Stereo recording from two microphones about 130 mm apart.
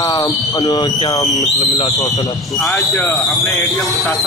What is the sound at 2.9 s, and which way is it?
Speech, 20° left (ahead or behind).